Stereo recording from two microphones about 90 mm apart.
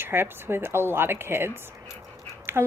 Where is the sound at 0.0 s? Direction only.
25° right (ahead or behind).